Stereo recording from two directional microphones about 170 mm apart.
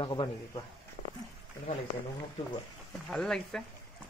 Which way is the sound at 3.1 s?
5° left (ahead or behind).